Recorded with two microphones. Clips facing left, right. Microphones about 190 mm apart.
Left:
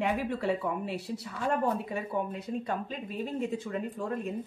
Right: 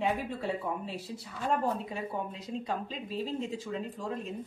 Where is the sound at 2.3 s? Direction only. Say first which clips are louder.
Left 2 dB; 55° left (ahead or behind).